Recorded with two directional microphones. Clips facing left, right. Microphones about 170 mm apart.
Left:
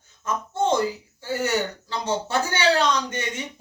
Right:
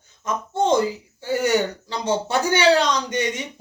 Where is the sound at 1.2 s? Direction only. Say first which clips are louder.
Right 4 dB; 15° right (ahead or behind).